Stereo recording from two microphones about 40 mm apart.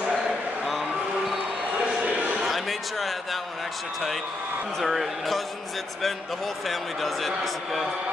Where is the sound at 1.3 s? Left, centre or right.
Centre.